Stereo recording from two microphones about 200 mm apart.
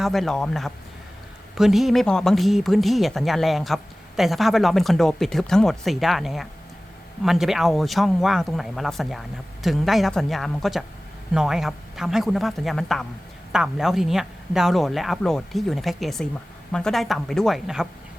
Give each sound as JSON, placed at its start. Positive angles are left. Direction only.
{"t": 0.0, "sound": "speech", "side_deg": 0}